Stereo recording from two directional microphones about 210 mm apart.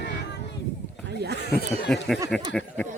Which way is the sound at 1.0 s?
50° right (ahead or behind).